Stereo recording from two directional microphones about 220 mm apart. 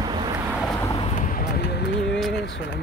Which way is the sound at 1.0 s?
35° left (ahead or behind).